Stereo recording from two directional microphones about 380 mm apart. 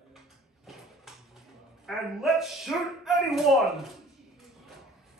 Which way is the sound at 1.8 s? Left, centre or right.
Centre.